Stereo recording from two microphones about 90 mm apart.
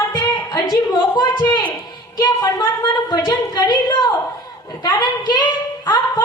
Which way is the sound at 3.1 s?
50° left (ahead or behind).